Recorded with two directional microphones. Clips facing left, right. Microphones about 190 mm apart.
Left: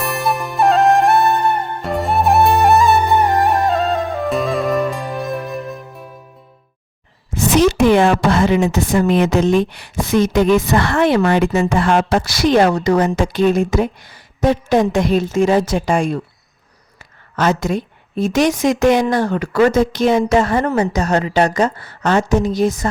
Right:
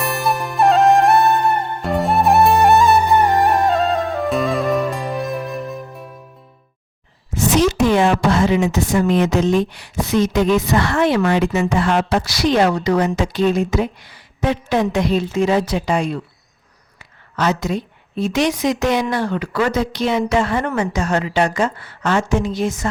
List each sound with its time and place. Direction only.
0.0 s music: centre (ahead or behind)
7.5 s a sound: 55° left (ahead or behind)
9.2 s a woman's voice: 60° left (ahead or behind)
17.3 s a woman's voice: 50° left (ahead or behind)
20.7 s a woman's voice: 25° left (ahead or behind)
20.9 s a woman's voice: 40° left (ahead or behind)